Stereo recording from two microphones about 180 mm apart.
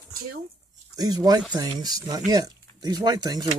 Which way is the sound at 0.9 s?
20° right (ahead or behind).